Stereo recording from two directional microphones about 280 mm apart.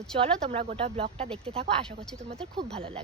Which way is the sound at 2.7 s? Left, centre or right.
Centre.